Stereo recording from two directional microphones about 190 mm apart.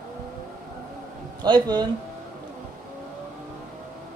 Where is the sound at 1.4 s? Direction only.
20° right (ahead or behind).